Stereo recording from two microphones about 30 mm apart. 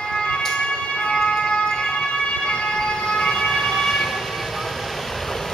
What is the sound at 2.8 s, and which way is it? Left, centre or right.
Emergency vehicle, left.